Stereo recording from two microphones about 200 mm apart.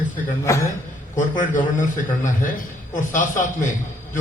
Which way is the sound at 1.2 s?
40° left (ahead or behind).